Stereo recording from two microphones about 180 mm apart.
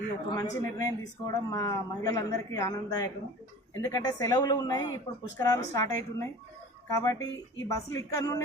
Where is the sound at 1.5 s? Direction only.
20° left (ahead or behind).